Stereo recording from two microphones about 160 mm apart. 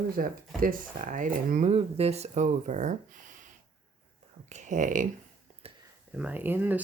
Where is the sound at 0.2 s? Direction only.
60° right (ahead or behind).